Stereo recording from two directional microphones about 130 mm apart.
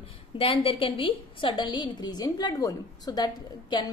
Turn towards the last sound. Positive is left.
turn(degrees=35)  # may be behind; listen again after turning